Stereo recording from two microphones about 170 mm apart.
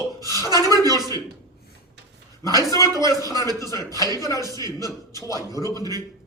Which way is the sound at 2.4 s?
20° left (ahead or behind).